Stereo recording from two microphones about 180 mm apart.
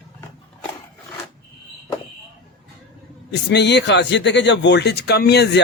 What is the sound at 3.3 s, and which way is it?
Speech, 70° left (ahead or behind).